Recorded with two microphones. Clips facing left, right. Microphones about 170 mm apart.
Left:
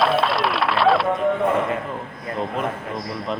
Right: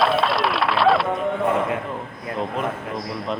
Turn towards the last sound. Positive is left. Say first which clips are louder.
# even
turn(degrees=0)  # may be behind; listen again after turning